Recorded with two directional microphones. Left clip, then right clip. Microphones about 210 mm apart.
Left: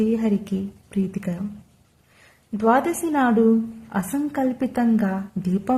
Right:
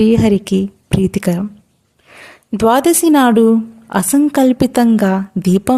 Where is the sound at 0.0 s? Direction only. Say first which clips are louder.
Right 11 dB; 40° right (ahead or behind).